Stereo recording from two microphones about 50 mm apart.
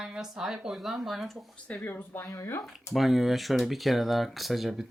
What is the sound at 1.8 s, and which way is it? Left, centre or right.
Speech, left.